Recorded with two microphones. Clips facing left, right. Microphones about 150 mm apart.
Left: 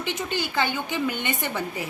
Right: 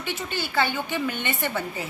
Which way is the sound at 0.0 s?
20° left (ahead or behind).